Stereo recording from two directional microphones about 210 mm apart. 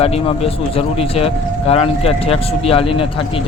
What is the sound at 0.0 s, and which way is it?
Speech, 30° left (ahead or behind).